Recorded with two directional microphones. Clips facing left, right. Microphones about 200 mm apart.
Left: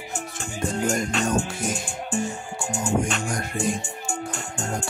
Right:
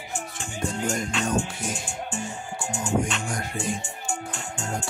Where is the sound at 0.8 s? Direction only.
45° left (ahead or behind).